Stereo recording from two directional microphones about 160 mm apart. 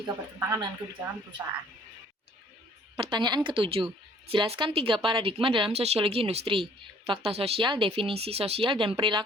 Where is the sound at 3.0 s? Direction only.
30° right (ahead or behind).